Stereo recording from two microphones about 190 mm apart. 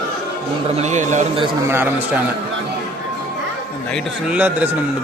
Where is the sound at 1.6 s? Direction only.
10° right (ahead or behind).